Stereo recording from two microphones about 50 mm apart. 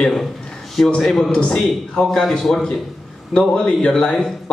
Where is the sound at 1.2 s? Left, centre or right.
Centre.